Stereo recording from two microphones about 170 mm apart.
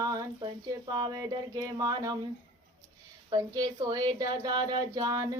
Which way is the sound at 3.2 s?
20° right (ahead or behind).